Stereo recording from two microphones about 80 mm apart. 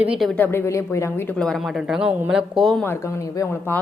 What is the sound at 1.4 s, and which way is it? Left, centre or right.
Speech, centre.